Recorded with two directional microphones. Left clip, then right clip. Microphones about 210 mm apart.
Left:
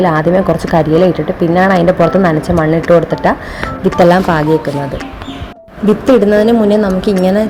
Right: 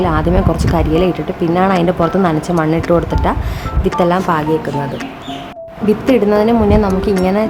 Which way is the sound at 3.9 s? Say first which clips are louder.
Left 5 dB; 15° left (ahead or behind).